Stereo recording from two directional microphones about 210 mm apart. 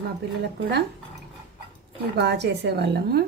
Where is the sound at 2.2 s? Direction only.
55° right (ahead or behind).